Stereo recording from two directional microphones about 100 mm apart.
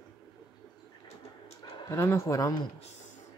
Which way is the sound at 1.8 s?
30° left (ahead or behind).